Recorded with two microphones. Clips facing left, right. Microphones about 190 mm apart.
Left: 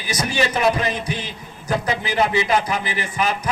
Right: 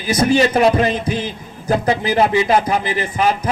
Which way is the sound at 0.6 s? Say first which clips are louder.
Right 6 dB; 30° right (ahead or behind).